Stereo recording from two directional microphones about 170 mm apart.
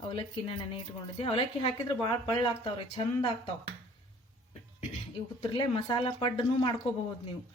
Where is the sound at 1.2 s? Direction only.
30° left (ahead or behind).